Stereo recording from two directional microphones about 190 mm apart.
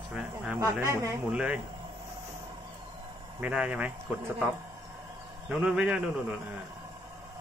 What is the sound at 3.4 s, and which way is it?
Speech, 5° right (ahead or behind).